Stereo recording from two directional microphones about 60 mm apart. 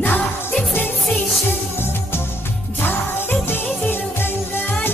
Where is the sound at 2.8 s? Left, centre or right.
Left.